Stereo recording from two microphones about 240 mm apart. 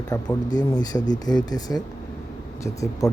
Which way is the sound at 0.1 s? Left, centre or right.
Centre.